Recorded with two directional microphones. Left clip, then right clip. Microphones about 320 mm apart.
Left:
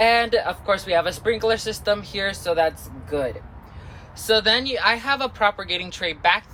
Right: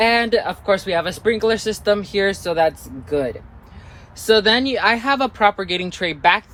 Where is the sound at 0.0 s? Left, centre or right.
Right.